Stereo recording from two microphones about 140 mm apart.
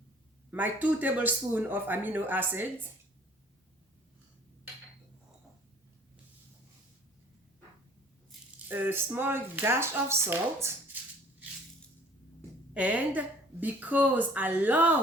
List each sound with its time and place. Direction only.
0.5 s a woman's voice: 10° right (ahead or behind)
8.6 s a woman's voice: 15° right (ahead or behind)
12.7 s a woman's voice: 10° right (ahead or behind)